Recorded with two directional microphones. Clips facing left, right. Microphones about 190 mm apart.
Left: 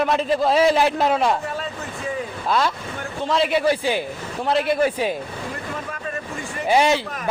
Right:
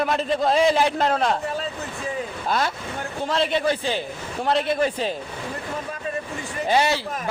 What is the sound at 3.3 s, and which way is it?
A man's voice, 5° left (ahead or behind).